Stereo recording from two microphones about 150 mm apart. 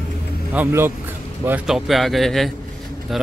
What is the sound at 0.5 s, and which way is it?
Speech, 15° right (ahead or behind).